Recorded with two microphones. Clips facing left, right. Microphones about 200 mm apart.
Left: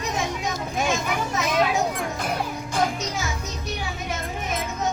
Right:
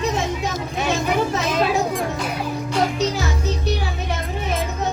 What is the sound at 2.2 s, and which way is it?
Music, 50° left (ahead or behind).